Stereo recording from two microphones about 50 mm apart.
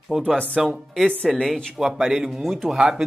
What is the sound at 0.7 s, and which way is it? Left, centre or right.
Speech, centre.